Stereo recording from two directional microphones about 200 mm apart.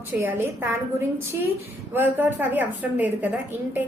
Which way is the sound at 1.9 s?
10° right (ahead or behind).